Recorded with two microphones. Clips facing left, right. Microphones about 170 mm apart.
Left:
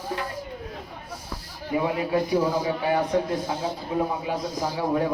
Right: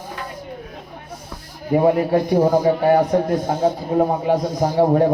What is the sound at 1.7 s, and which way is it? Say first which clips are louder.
A man's voice: right 8 dB; 45° right (ahead or behind).